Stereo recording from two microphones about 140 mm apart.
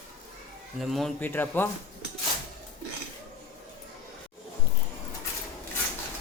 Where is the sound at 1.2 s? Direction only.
15° left (ahead or behind).